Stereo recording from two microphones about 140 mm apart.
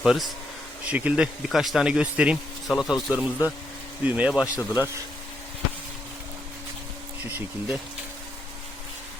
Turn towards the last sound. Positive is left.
turn(degrees=-10)  # may be behind; listen again after turning